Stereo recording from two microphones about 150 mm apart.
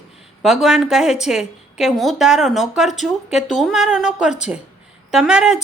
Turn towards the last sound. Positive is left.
turn(degrees=-5)  # may be behind; listen again after turning